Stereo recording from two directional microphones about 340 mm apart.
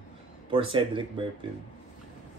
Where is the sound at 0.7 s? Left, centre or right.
Centre.